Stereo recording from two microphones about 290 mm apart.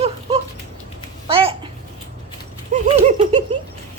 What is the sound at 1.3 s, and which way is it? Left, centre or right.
Babbling, centre.